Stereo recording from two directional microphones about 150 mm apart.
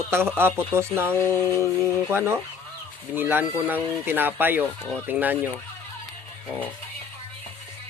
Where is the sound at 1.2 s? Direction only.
20° left (ahead or behind).